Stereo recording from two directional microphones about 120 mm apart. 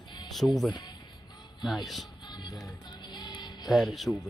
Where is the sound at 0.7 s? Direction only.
35° left (ahead or behind).